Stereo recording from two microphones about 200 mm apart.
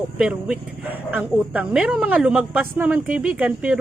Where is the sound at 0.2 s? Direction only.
5° right (ahead or behind).